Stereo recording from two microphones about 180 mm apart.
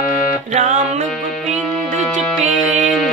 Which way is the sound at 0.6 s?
40° right (ahead or behind).